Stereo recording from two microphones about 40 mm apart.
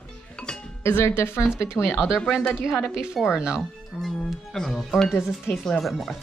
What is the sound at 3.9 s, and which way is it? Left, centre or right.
Speech, centre.